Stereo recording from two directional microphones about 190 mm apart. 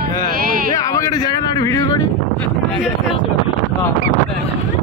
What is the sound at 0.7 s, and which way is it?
Speech, 20° left (ahead or behind).